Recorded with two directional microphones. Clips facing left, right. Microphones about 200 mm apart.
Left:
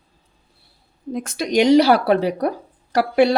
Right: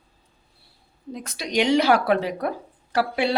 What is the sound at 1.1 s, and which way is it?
Speech, 50° left (ahead or behind).